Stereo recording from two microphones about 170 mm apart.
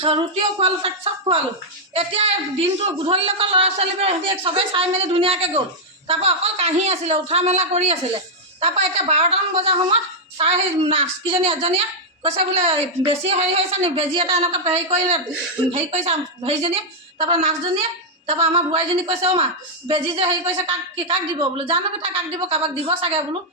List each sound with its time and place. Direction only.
0.0 s a woman's voice: 35° right (ahead or behind)